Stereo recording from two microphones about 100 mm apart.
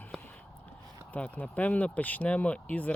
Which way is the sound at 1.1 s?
15° left (ahead or behind).